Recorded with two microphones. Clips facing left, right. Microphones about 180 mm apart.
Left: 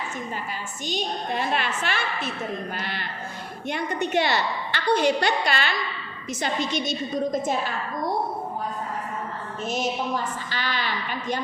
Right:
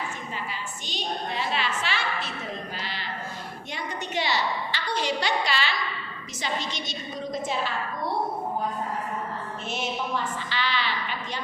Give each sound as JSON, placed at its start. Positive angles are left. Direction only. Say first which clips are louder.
{"t": 0.9, "sound": "a woman's voice", "louder": "left 4 dB", "side_deg": 50}
{"t": 9.6, "sound": "a woman's voice", "louder": "left 6 dB", "side_deg": 40}
{"t": 10.5, "sound": "a sound", "louder": "right 1 dB", "side_deg": 45}